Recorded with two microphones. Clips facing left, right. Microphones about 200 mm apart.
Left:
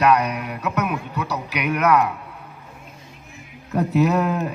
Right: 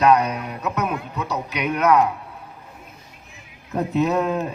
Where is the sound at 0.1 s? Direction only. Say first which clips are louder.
Right 1 dB; 30° right (ahead or behind).